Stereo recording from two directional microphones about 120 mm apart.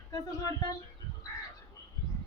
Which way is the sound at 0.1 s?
30° left (ahead or behind).